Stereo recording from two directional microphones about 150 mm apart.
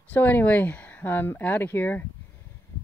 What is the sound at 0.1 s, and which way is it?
Speech, 10° left (ahead or behind).